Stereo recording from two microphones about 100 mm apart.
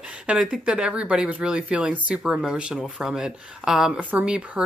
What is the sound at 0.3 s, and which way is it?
Speech, 10° right (ahead or behind).